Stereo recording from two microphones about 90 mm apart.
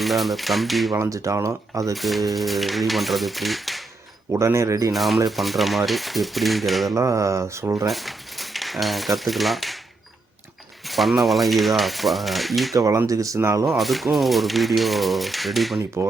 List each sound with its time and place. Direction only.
0.0 s speech: centre (ahead or behind)
0.9 s speech: 35° right (ahead or behind)
1.9 s speech: centre (ahead or behind)
4.3 s speech: 30° right (ahead or behind)
4.9 s speech: centre (ahead or behind)
6.9 s speech: 35° right (ahead or behind)
7.9 s speech: centre (ahead or behind)
10.8 s speech: centre (ahead or behind)
12.7 s speech: 35° right (ahead or behind)
13.7 s speech: centre (ahead or behind)